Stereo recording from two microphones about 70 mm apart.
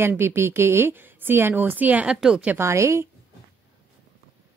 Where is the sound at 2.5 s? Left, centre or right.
Right.